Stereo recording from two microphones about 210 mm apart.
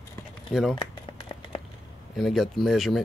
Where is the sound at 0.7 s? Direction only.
25° left (ahead or behind).